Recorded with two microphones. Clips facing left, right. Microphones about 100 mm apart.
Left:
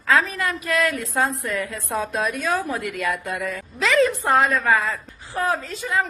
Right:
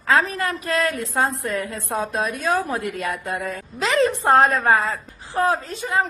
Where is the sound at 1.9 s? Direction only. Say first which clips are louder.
Even; 30° right (ahead or behind).